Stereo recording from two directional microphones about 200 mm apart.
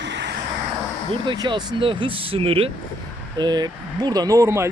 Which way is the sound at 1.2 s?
20° right (ahead or behind).